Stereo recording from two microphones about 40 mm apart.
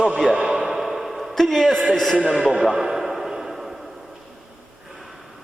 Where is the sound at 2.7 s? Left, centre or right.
Centre.